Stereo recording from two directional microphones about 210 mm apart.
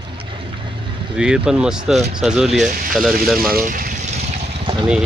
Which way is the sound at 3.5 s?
40° right (ahead or behind).